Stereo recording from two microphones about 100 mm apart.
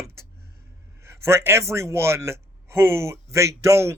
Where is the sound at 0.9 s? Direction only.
25° right (ahead or behind).